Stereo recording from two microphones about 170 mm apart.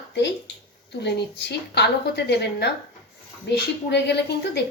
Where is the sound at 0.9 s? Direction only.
90° left.